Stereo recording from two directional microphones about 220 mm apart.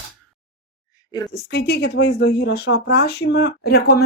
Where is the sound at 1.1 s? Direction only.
20° left (ahead or behind).